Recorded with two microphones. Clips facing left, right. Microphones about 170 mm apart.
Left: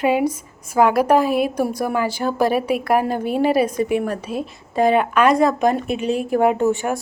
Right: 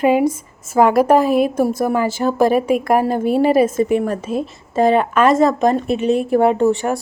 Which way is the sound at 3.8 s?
5° left (ahead or behind).